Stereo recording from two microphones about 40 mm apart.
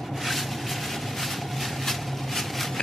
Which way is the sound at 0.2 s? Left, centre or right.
Centre.